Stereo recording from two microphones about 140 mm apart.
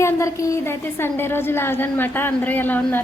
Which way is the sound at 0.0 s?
20° left (ahead or behind).